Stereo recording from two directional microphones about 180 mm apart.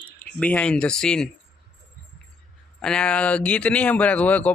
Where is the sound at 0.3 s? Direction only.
5° left (ahead or behind).